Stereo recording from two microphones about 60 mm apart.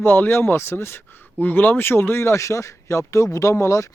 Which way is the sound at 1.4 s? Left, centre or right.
Left.